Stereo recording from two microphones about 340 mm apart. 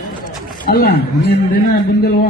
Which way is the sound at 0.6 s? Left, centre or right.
Left.